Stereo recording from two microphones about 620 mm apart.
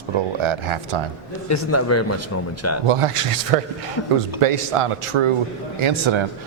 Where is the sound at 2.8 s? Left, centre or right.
Right.